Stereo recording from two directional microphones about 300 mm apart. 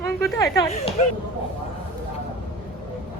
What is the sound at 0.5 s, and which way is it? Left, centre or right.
Speech, centre.